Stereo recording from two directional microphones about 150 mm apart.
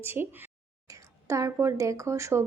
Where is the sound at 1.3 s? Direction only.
20° right (ahead or behind).